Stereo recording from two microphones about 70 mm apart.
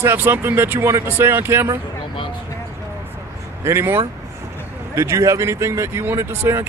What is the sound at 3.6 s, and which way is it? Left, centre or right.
Speech, right.